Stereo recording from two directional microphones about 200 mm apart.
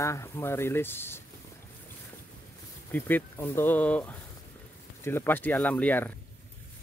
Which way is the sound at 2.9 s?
10° left (ahead or behind).